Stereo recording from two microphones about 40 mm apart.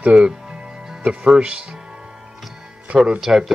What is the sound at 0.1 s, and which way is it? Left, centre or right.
Music, centre.